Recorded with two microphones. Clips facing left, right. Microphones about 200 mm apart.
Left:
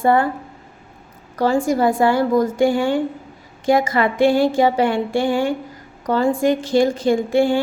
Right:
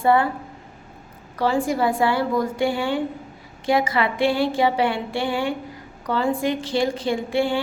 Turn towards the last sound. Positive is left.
turn(degrees=45)  # may be behind; listen again after turning